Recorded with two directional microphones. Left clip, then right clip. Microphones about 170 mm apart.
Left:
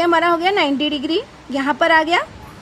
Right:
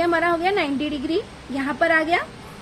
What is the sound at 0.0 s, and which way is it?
A woman's voice, 40° left (ahead or behind).